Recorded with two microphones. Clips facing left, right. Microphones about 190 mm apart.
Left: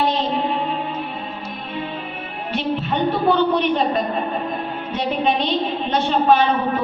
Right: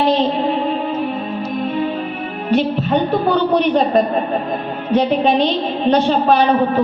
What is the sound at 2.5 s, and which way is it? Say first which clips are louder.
Music: right 7 dB; 40° right (ahead or behind).